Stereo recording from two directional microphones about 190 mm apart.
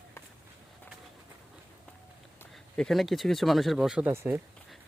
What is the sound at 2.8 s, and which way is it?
Speech, centre (ahead or behind).